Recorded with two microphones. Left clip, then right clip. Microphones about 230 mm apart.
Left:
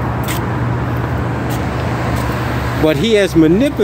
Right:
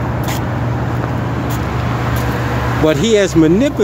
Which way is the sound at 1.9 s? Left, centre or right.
Right.